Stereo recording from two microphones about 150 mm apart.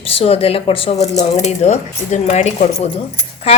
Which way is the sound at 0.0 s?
40° left (ahead or behind).